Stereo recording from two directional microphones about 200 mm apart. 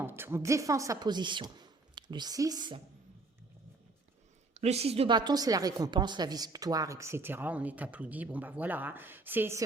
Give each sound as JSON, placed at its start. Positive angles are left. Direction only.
{"t": 0.0, "sound": "speech", "side_deg": -10}
{"t": 4.5, "sound": "a woman's voice", "side_deg": -30}